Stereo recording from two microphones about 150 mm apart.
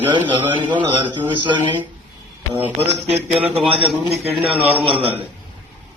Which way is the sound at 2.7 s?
45° right (ahead or behind).